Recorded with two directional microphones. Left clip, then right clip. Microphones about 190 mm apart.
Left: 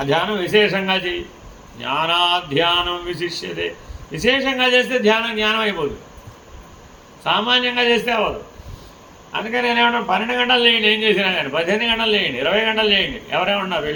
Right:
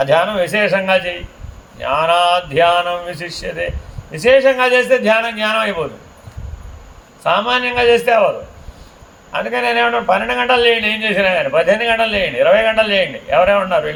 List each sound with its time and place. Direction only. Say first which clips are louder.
0.0 s speech: right 6 dB; 75° right (ahead or behind)
7.3 s speech: right 2 dB; 70° right (ahead or behind)
9.3 s speech: right 3 dB; 75° right (ahead or behind)